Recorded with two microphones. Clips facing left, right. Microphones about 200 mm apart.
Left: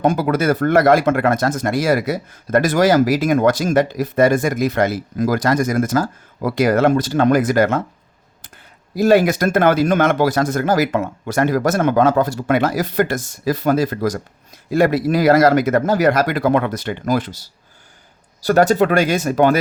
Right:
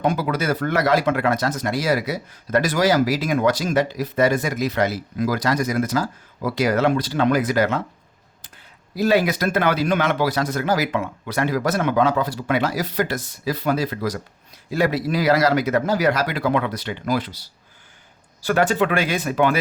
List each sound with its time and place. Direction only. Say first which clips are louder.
0.0 s speech: left 5 dB; 50° left (ahead or behind)
9.0 s speech: left 5 dB; 50° left (ahead or behind)
18.4 s speech: left 5 dB; 40° left (ahead or behind)